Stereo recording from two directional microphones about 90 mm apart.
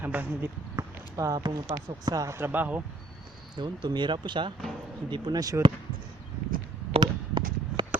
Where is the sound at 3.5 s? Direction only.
55° right (ahead or behind).